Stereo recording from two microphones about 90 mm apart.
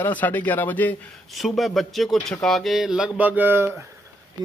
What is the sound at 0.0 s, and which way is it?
Speech, 20° left (ahead or behind).